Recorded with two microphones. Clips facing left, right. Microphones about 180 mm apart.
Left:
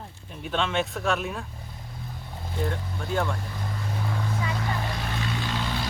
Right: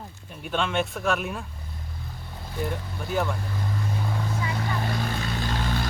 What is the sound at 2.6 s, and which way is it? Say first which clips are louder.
Speech: left 1 dB; 5° right (ahead or behind).